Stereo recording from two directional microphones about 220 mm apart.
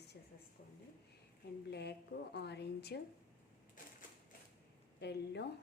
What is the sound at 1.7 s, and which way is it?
A woman's voice, 50° left (ahead or behind).